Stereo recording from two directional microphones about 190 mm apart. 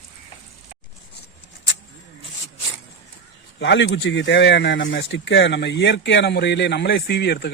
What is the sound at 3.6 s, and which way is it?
Speech, 65° left (ahead or behind).